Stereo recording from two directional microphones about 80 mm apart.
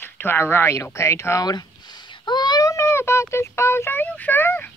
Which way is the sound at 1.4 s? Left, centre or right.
Left.